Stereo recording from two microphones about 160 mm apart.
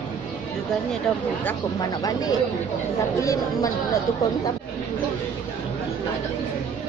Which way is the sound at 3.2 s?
20° left (ahead or behind).